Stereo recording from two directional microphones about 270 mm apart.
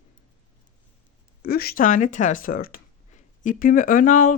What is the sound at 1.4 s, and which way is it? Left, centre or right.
Speech, left.